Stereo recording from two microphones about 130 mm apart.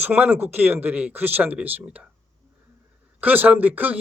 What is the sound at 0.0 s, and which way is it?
Speech, 15° right (ahead or behind).